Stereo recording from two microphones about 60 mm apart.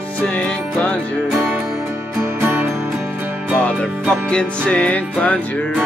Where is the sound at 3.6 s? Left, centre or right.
Centre.